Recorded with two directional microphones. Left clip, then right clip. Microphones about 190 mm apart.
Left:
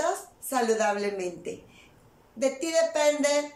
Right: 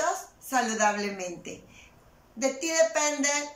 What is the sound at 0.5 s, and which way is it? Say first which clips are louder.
A woman's voice: even; 20° left (ahead or behind).